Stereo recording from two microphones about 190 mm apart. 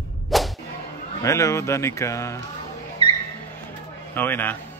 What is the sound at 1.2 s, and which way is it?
Speech, 15° left (ahead or behind).